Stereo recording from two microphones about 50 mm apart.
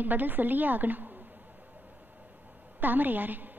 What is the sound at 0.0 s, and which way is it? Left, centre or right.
A woman's voice, right.